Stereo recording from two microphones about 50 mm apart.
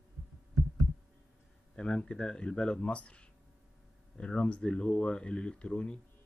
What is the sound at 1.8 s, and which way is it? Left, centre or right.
Speech, centre.